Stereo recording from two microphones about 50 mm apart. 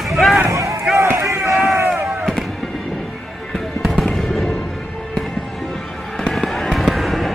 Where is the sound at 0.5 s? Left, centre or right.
Right.